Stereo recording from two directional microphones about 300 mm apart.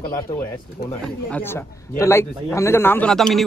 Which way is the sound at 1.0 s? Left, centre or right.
Centre.